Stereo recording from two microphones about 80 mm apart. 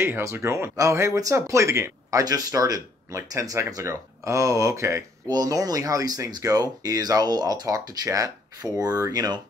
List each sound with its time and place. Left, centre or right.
0.0 s speech: right
5.3 s speech: right